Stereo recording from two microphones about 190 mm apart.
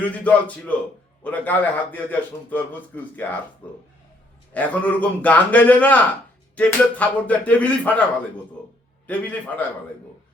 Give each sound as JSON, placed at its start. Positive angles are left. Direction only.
{"t": 0.0, "sound": "a man's voice", "side_deg": 5}
{"t": 9.0, "sound": "a man's voice", "side_deg": 10}